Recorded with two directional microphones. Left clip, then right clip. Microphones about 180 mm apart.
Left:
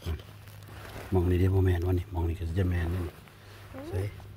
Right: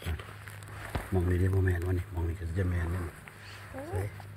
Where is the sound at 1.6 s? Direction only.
40° left (ahead or behind).